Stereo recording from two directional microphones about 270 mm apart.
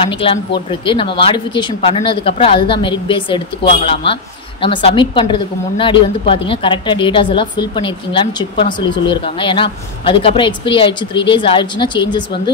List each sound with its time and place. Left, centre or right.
0.2 s a woman's voice: centre